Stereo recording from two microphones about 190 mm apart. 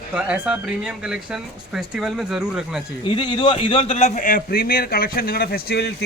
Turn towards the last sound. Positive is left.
turn(degrees=55)  # may be behind; listen again after turning